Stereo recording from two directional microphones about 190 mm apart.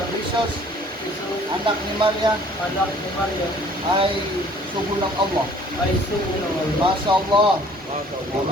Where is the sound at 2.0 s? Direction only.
25° right (ahead or behind).